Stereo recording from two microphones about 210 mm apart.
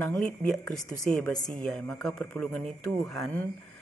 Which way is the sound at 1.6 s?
5° left (ahead or behind).